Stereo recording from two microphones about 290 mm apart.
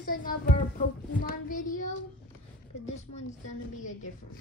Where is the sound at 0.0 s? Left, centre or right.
Left.